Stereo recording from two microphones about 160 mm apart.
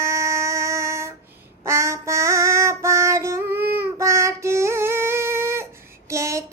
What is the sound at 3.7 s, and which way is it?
Child singing, 15° right (ahead or behind).